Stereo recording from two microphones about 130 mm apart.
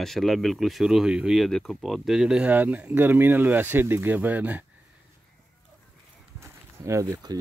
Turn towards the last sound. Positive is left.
turn(degrees=-25)  # may be behind; listen again after turning